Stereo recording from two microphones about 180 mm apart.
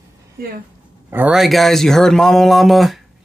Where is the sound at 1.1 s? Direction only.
5° right (ahead or behind).